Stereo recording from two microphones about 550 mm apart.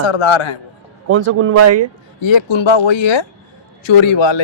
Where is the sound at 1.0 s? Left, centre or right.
Right.